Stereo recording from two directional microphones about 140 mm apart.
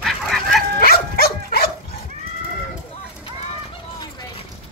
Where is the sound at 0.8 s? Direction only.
90° left.